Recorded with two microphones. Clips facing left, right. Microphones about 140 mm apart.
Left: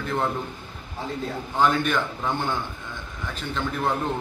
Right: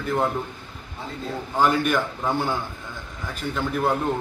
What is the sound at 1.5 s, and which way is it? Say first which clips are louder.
A man's voice: right 1 dB; 5° right (ahead or behind).